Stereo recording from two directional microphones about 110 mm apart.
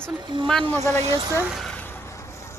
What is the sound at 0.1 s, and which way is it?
Speech, 45° right (ahead or behind).